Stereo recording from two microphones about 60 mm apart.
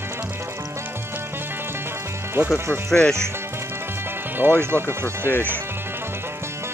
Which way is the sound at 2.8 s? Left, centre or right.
Centre.